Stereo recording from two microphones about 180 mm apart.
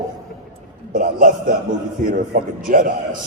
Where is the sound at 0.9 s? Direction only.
50° right (ahead or behind).